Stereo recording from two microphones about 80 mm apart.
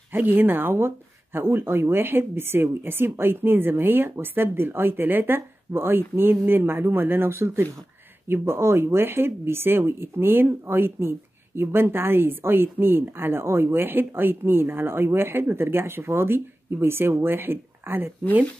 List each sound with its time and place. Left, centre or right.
0.1 s speech: right